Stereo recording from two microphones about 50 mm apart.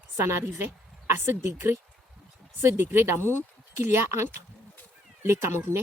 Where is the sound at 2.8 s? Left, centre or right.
Right.